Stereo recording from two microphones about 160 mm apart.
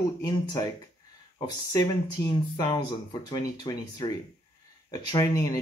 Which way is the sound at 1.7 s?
20° left (ahead or behind).